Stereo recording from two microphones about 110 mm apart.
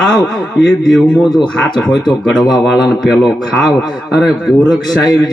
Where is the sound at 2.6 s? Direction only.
5° right (ahead or behind).